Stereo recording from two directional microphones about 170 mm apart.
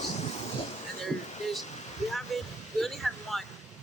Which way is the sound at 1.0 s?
Centre (ahead or behind).